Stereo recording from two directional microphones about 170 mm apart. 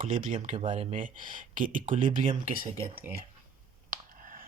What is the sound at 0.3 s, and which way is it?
Speech, 35° right (ahead or behind).